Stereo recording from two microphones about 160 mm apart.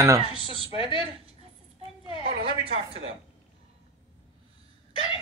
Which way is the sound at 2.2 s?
35° right (ahead or behind).